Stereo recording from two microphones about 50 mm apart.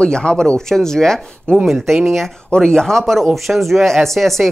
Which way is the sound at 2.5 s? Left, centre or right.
Centre.